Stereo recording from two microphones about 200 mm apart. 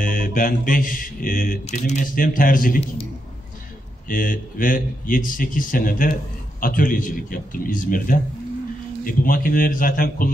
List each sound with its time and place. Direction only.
0.0 s mantra: 45° left (ahead or behind)
1.6 s speech: 35° left (ahead or behind)
4.1 s speech: 45° left (ahead or behind)